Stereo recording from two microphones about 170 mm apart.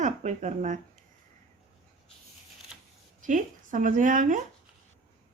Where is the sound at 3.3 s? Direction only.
50° right (ahead or behind).